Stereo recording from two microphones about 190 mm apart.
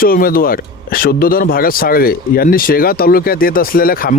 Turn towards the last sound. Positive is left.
turn(degrees=50)  # may be behind; listen again after turning